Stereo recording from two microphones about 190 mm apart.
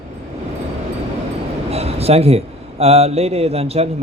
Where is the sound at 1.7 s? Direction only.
30° right (ahead or behind).